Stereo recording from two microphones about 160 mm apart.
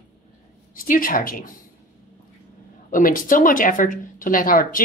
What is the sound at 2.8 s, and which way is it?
Speech, 55° left (ahead or behind).